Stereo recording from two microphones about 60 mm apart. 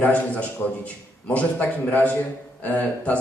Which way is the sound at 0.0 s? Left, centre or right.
Left.